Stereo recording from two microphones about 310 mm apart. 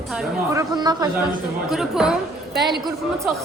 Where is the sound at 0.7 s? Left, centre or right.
Centre.